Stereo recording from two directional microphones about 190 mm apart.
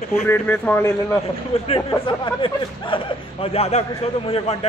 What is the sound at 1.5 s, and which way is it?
Speech, 30° left (ahead or behind).